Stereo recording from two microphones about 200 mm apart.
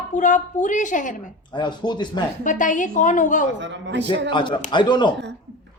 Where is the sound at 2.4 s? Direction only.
40° left (ahead or behind).